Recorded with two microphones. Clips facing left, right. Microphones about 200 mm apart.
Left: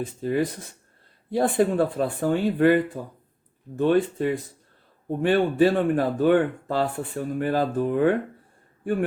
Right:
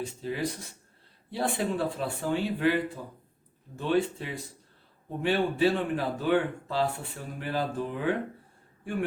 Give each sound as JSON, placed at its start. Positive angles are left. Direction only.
{"t": 0.0, "sound": "a man's voice", "side_deg": 55}